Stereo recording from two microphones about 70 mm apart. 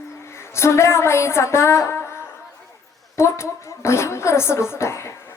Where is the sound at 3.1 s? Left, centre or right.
Left.